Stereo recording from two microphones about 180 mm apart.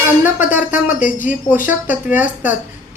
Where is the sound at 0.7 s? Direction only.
45° left (ahead or behind).